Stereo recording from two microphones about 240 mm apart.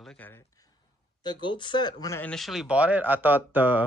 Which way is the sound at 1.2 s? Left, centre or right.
Centre.